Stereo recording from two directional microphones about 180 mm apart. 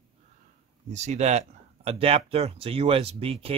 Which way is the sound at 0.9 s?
40° right (ahead or behind).